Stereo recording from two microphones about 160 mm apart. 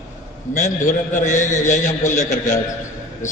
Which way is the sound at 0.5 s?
55° left (ahead or behind).